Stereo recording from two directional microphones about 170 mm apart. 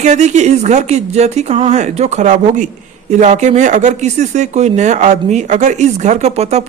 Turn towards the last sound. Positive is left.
turn(degrees=-40)  # may be behind; listen again after turning